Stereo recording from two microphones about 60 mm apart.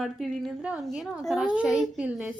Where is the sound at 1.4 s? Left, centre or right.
Centre.